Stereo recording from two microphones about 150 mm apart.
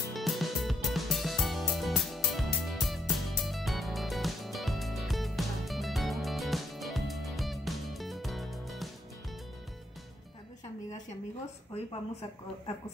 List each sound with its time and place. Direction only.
0.1 s music: centre (ahead or behind)
11.7 s speech: 40° left (ahead or behind)